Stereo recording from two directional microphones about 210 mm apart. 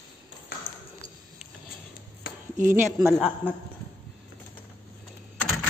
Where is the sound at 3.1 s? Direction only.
5° left (ahead or behind).